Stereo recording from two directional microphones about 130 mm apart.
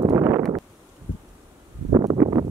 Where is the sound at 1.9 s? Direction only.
30° right (ahead or behind).